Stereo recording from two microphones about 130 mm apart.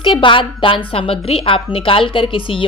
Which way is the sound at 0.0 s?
40° left (ahead or behind).